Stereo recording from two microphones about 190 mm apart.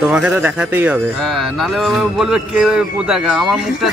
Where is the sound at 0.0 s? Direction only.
5° right (ahead or behind).